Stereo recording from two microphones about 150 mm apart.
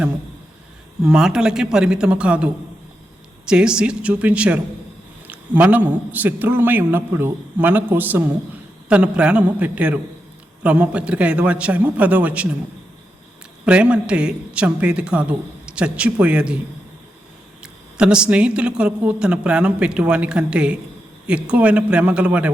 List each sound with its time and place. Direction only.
1.0 s a man's voice: 5° right (ahead or behind)
13.7 s a woman's voice: 10° right (ahead or behind)
17.6 s a woman's voice: 5° right (ahead or behind)